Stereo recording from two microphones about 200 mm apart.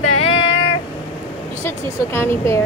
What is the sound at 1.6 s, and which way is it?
Speech, 15° left (ahead or behind).